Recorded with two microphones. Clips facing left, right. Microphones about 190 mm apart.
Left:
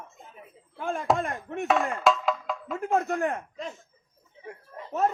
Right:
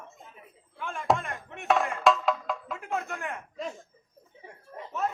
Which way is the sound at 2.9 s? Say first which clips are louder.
Left 8 dB; 40° left (ahead or behind).